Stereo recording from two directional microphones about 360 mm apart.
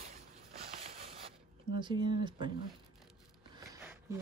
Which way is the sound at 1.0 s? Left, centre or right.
Centre.